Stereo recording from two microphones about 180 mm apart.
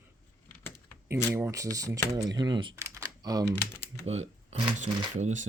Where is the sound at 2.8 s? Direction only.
15° right (ahead or behind).